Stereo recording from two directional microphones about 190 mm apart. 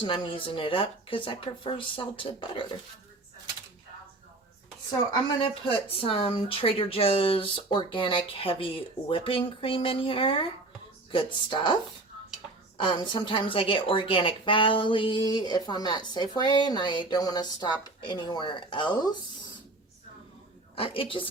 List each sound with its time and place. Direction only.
0.0 s a woman's voice: 25° left (ahead or behind)
5.3 s a woman's voice: 25° left (ahead or behind)
12.7 s a woman's voice: 25° left (ahead or behind)
20.7 s a woman's voice: 30° left (ahead or behind)